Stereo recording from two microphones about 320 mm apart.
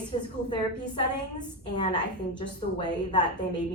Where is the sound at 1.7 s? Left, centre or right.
Centre.